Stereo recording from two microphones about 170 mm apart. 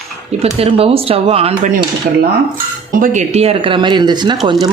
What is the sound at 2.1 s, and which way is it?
Dishes, 55° right (ahead or behind).